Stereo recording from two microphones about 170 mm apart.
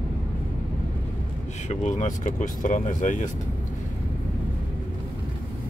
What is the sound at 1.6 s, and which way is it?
Speech, 45° left (ahead or behind).